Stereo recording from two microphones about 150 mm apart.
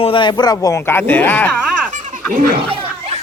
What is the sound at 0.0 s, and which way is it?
Speech, 35° left (ahead or behind).